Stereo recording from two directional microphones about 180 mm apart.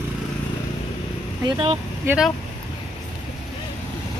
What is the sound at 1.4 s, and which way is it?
Speech, 30° right (ahead or behind).